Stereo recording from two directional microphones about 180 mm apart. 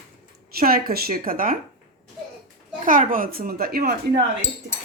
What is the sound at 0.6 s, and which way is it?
Speech, 55° right (ahead or behind).